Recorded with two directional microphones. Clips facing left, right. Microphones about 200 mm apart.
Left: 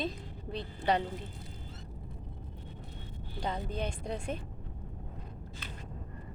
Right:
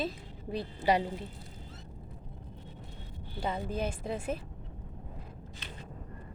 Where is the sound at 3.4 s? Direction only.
5° right (ahead or behind).